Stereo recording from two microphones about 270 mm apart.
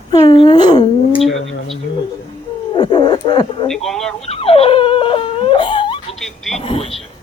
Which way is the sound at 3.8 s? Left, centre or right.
Centre.